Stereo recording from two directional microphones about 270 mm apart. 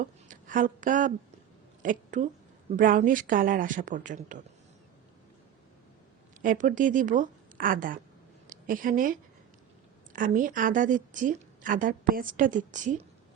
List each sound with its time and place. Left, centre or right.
0.0 s a woman's voice: right
6.4 s a woman's voice: right